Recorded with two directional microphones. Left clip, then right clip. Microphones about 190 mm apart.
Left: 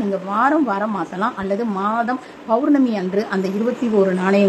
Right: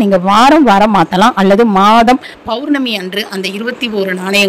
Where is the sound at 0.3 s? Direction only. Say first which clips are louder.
Right 11 dB; 45° right (ahead or behind).